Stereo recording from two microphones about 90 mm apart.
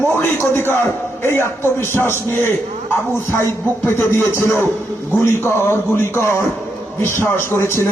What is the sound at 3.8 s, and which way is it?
A man's voice, 25° left (ahead or behind).